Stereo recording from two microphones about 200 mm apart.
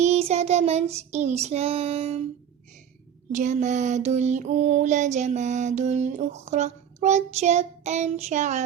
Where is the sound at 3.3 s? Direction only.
40° right (ahead or behind).